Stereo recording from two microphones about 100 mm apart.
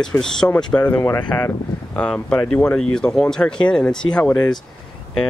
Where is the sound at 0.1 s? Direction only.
15° left (ahead or behind).